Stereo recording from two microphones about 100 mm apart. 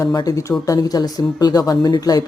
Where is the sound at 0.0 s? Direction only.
35° left (ahead or behind).